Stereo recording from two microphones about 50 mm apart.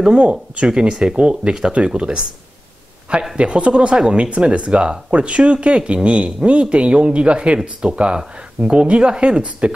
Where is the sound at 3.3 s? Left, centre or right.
Right.